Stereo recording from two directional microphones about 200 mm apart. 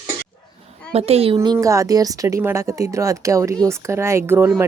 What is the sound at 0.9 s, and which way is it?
Speech, 30° right (ahead or behind).